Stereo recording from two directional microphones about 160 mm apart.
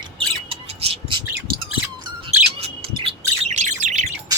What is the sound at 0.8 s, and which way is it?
Bird, 40° right (ahead or behind).